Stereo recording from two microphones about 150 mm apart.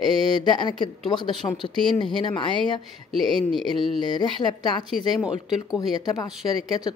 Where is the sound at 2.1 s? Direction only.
35° left (ahead or behind).